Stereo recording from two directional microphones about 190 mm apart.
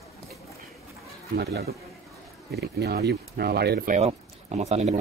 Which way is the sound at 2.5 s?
60° right (ahead or behind).